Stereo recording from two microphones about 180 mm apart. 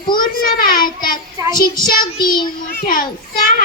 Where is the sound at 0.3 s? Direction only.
50° left (ahead or behind).